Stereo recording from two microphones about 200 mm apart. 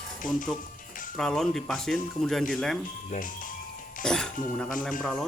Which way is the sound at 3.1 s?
40° left (ahead or behind).